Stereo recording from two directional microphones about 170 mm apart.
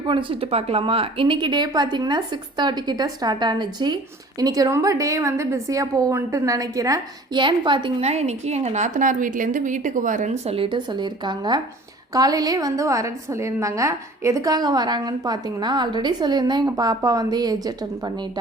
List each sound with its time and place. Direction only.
0.1 s a woman's voice: 30° right (ahead or behind)